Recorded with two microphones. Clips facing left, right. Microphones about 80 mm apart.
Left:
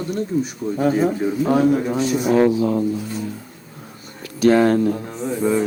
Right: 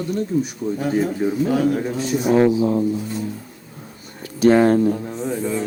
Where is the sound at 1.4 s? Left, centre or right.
Left.